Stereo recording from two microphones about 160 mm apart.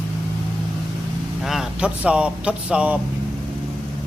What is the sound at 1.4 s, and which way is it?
A man's voice, centre (ahead or behind).